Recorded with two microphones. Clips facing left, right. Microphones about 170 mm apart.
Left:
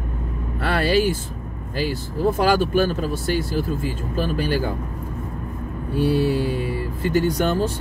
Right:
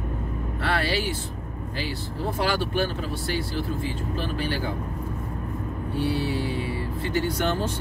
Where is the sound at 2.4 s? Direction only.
45° left (ahead or behind).